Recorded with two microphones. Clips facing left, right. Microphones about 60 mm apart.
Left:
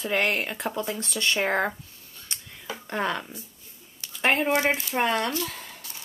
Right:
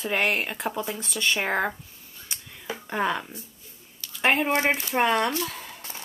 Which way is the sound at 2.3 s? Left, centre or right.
Centre.